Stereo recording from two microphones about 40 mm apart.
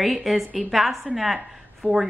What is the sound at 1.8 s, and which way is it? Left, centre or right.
Speech, right.